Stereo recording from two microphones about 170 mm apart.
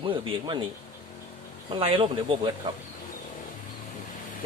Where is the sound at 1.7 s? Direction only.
30° right (ahead or behind).